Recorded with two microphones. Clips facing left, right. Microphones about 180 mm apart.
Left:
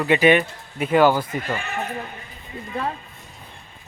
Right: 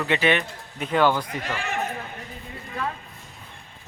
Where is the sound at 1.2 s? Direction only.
85° right.